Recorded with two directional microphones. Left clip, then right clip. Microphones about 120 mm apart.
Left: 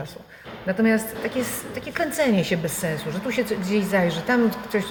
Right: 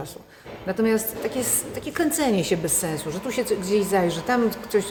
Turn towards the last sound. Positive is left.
turn(degrees=-35)  # may be behind; listen again after turning